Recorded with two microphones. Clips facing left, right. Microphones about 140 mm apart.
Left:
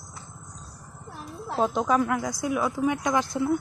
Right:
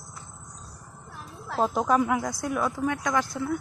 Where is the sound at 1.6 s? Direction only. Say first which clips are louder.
Even; 5° right (ahead or behind).